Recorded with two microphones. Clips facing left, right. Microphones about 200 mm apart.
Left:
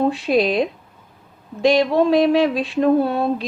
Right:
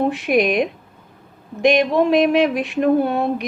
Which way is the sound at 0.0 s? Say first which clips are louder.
Even; 20° right (ahead or behind).